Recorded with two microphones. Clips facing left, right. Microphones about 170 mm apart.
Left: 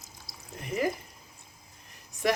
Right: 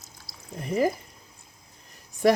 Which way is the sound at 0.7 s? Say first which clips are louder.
Right 5 dB; 35° right (ahead or behind).